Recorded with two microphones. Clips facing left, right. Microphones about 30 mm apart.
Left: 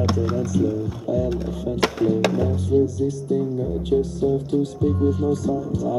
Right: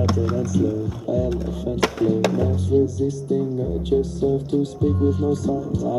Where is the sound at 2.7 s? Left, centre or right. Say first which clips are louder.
Even; right.